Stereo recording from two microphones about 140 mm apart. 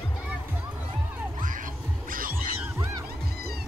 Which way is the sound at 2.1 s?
85° right.